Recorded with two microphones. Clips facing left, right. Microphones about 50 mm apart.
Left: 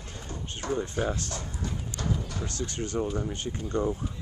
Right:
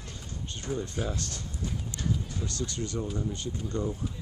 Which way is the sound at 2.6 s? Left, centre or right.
Left.